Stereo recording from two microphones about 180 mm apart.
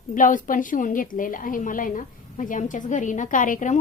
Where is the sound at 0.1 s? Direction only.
45° left (ahead or behind).